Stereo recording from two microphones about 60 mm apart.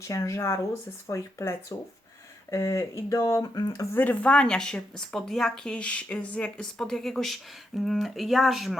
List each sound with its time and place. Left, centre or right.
0.0 s speech: left
3.4 s speech: left
3.9 s a woman's voice: left
6.7 s speech: centre